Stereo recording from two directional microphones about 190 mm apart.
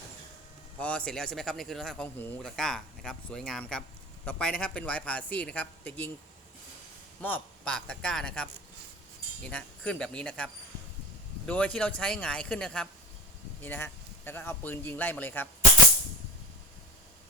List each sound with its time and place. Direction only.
0.8 s speech: 5° left (ahead or behind)
7.2 s a man's voice: 10° left (ahead or behind)